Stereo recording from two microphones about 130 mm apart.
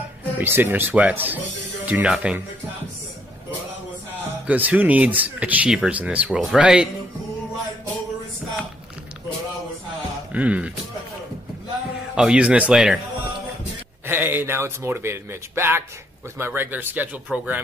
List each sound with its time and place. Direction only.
0.4 s speech: 15° right (ahead or behind)
4.5 s speech: 10° right (ahead or behind)
10.3 s speech: 10° right (ahead or behind)
12.2 s speech: 5° right (ahead or behind)
14.0 s speech: 15° right (ahead or behind)